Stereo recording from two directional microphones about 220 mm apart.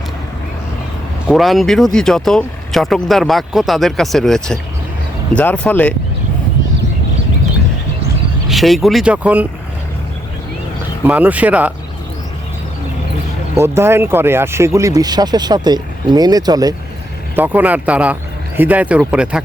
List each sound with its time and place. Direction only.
1.3 s speech: centre (ahead or behind)
8.4 s speech: centre (ahead or behind)
11.0 s speech: 5° right (ahead or behind)
13.6 s speech: 10° right (ahead or behind)